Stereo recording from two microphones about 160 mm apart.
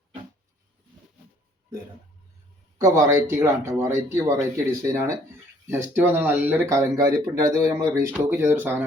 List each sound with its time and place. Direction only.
2.8 s speech: 20° right (ahead or behind)